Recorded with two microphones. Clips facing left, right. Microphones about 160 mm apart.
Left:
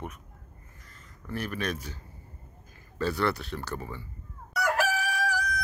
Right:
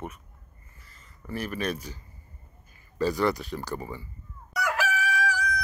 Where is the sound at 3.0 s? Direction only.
10° right (ahead or behind).